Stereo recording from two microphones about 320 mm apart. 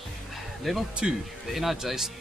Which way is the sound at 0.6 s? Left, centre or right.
Centre.